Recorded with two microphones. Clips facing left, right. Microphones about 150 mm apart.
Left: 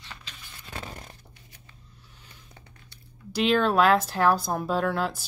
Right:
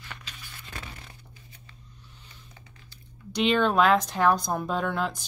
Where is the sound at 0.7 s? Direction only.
40° left (ahead or behind).